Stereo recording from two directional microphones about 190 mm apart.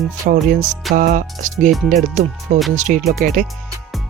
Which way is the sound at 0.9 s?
45° right (ahead or behind).